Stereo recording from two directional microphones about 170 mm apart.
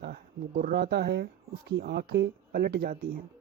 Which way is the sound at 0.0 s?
65° right (ahead or behind).